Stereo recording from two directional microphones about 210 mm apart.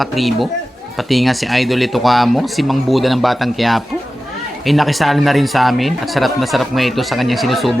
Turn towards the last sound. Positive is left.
turn(degrees=0)  # may be behind; listen again after turning